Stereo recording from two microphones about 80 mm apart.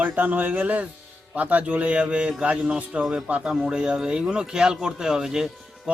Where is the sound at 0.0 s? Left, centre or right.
Right.